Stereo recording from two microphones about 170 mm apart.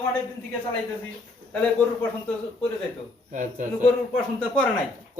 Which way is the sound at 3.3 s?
50° right (ahead or behind).